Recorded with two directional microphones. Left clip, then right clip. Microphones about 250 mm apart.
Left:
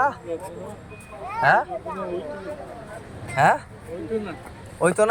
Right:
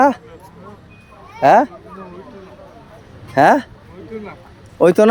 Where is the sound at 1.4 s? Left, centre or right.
Right.